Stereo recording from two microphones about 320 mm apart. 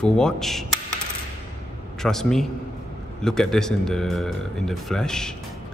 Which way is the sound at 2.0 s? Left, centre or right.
Centre.